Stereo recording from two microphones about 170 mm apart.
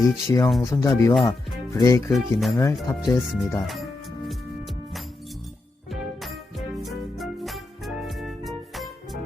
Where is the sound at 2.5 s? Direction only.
15° left (ahead or behind).